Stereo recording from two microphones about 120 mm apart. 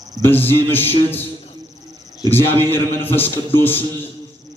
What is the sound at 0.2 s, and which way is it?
Speech, 15° left (ahead or behind).